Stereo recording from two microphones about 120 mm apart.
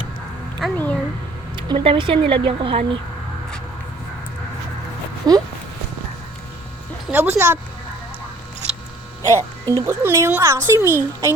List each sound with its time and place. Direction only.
0.6 s speech: centre (ahead or behind)
1.5 s speech: 40° right (ahead or behind)
5.2 s speech: 35° right (ahead or behind)
7.1 s speech: 15° right (ahead or behind)
9.2 s a woman's voice: 25° right (ahead or behind)